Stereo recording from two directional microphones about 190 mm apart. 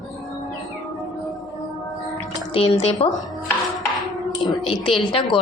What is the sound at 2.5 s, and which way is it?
Speech, 30° left (ahead or behind).